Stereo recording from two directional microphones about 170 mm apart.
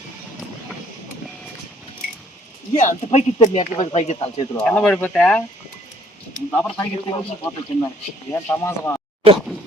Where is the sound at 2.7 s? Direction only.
45° left (ahead or behind).